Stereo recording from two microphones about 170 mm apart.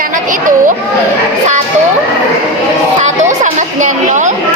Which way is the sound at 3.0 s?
45° right (ahead or behind).